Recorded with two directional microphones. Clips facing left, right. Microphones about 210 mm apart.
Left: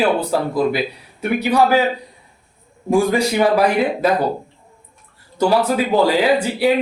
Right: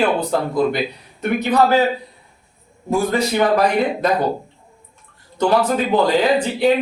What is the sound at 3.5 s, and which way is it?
Speech, 5° left (ahead or behind).